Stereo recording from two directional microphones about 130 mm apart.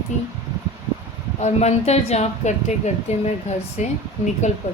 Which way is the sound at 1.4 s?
60° left (ahead or behind).